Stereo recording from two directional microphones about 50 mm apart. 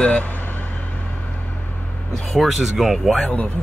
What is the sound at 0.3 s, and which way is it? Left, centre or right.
Vehicle, left.